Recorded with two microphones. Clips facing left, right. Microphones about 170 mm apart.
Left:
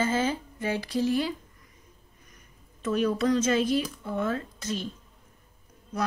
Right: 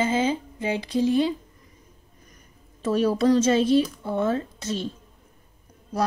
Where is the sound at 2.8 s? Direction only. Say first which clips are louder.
Right 4 dB; 30° right (ahead or behind).